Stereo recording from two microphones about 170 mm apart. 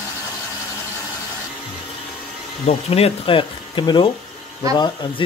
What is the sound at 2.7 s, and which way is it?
Speech, 35° left (ahead or behind).